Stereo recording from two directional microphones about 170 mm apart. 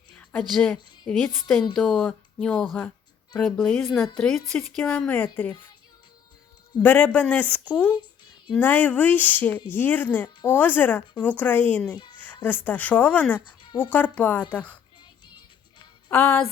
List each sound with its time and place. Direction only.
0.2 s a woman's voice: 10° left (ahead or behind)
6.8 s speech: 10° left (ahead or behind)
13.6 s a sound: 30° left (ahead or behind)
13.9 s speech: 10° left (ahead or behind)
16.0 s speech: 10° left (ahead or behind)